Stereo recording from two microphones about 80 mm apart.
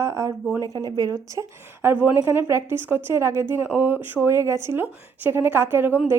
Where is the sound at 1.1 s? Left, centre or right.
Right.